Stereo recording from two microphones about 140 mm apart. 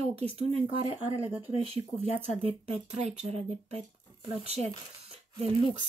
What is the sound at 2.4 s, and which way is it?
Speech, 50° right (ahead or behind).